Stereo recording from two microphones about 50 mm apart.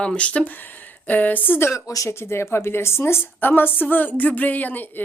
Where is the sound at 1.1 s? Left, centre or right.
Left.